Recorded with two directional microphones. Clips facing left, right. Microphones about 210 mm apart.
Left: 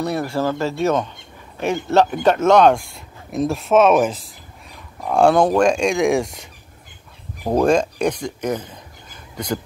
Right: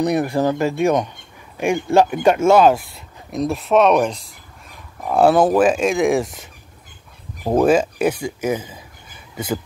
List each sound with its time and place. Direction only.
0.0 s speech: 20° right (ahead or behind)